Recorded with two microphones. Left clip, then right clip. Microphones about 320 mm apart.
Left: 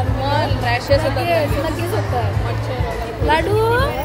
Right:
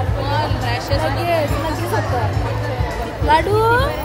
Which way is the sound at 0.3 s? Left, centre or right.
Left.